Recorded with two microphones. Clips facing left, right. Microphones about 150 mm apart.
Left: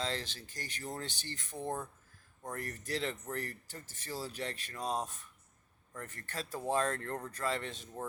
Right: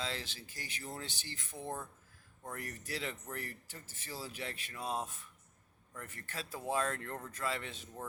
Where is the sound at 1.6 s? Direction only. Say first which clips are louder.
Left 4 dB; 15° left (ahead or behind).